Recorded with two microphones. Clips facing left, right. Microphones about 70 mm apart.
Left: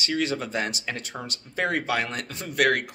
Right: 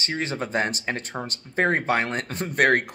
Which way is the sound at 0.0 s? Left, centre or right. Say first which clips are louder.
Left 1 dB; right.